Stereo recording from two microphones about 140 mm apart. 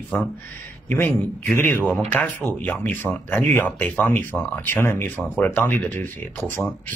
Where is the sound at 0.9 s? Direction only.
15° left (ahead or behind).